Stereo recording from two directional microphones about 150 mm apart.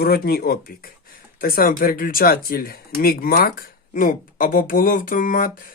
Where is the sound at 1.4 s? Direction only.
75° left (ahead or behind).